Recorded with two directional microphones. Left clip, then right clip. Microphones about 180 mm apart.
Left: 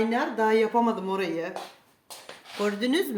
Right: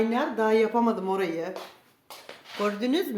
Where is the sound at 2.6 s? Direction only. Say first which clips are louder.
Left 1 dB; 15° left (ahead or behind).